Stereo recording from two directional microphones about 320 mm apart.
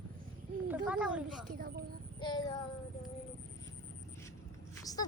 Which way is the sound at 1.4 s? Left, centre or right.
Right.